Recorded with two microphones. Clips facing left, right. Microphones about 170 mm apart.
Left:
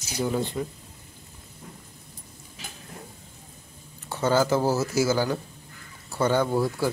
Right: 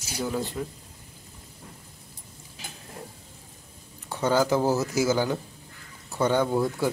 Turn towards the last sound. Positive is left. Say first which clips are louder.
# even
turn(degrees=5)  # may be behind; listen again after turning